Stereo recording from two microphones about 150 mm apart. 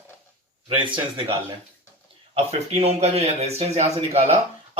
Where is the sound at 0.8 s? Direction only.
35° right (ahead or behind).